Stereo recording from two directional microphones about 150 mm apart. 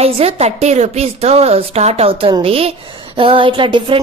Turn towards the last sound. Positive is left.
turn(degrees=-35)  # may be behind; listen again after turning